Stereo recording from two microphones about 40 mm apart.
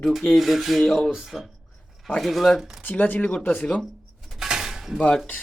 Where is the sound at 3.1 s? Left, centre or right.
Left.